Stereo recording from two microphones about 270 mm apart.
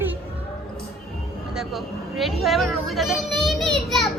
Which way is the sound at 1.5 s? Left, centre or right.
Centre.